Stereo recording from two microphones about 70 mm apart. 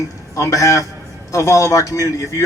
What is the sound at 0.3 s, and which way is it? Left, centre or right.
A man's voice, left.